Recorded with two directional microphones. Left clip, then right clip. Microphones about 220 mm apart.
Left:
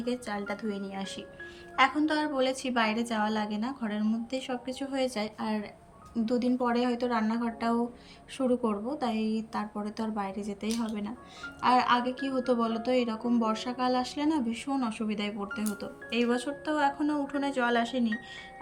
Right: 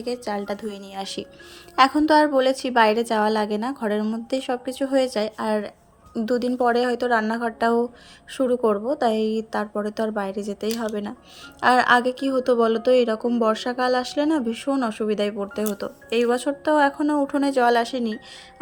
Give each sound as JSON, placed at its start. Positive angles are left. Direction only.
{"t": 0.0, "sound": "a woman's voice", "side_deg": -25}